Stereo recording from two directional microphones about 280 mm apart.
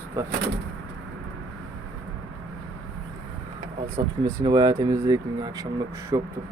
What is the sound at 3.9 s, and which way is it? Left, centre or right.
Speech, centre.